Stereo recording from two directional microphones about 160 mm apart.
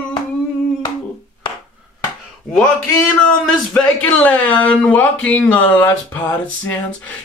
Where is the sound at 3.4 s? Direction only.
5° left (ahead or behind).